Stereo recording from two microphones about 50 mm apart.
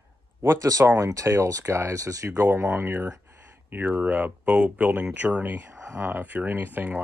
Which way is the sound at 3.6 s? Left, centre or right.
Right.